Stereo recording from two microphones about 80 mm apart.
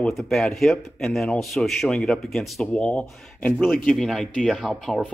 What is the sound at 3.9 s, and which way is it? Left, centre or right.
Speech, centre.